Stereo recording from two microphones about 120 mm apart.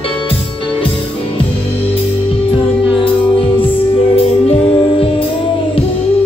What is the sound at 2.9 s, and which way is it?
Music, 50° left (ahead or behind).